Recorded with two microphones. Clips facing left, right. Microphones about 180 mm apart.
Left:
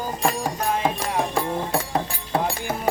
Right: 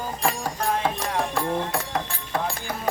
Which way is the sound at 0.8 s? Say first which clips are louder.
Left 2 dB; 20° left (ahead or behind).